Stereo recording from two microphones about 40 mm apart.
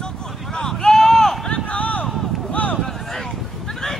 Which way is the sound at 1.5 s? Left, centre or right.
Left.